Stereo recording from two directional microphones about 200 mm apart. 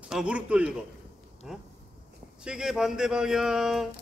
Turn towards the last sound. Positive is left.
turn(degrees=0)  # may be behind; listen again after turning